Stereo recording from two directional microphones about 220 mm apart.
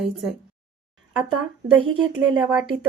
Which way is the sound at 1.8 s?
25° right (ahead or behind).